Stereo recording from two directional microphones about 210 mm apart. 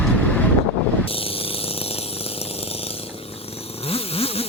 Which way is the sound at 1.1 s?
25° left (ahead or behind).